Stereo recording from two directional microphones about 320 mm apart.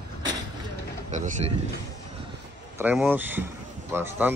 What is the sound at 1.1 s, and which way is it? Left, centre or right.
Speech, right.